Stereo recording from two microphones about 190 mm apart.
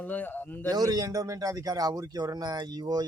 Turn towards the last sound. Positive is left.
turn(degrees=-20)  # may be behind; listen again after turning